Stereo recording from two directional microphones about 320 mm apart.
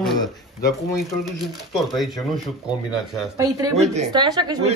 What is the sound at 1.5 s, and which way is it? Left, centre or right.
Speech, centre.